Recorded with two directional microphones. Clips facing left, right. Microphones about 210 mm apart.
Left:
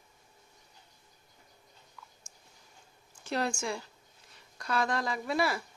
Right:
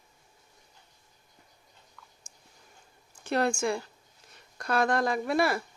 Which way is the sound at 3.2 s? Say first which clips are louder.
Right 5 dB; 60° right (ahead or behind).